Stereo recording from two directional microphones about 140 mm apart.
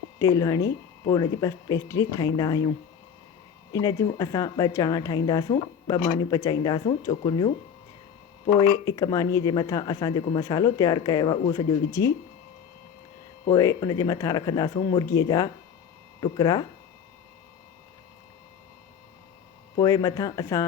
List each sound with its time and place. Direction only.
0.2 s speech: 25° left (ahead or behind)
3.7 s speech: 25° left (ahead or behind)
8.8 s speech: 25° left (ahead or behind)
11.9 s speech: 20° left (ahead or behind)
13.4 s speech: 25° left (ahead or behind)
19.7 s speech: 25° left (ahead or behind)